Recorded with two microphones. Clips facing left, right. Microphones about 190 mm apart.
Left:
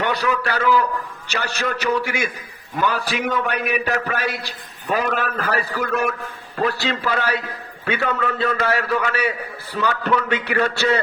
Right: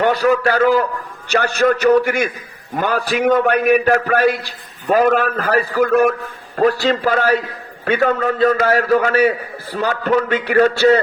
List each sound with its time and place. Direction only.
0.0 s a man's voice: 45° right (ahead or behind)